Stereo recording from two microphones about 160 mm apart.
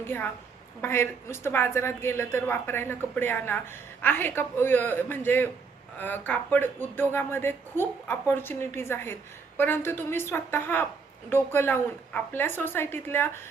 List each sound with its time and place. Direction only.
0.0 s speech: 15° left (ahead or behind)